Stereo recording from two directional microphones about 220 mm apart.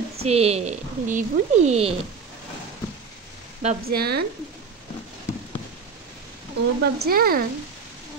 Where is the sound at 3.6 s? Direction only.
40° right (ahead or behind).